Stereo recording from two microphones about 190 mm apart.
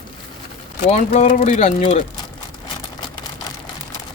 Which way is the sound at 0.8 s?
35° left (ahead or behind).